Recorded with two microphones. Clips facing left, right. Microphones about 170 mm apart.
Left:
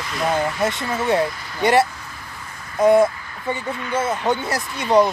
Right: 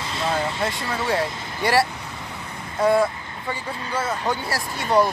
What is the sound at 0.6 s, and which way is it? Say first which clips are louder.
Speech: left 4 dB; 20° left (ahead or behind).